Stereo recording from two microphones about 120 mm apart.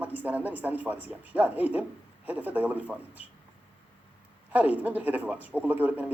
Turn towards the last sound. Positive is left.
turn(degrees=-15)  # may be behind; listen again after turning